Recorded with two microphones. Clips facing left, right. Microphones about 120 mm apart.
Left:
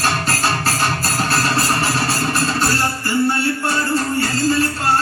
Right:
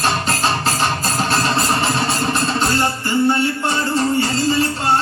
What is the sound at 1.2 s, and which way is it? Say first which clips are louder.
Music: right 1 dB; 20° right (ahead or behind).